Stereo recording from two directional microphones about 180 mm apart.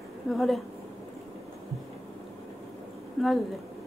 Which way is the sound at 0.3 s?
Centre (ahead or behind).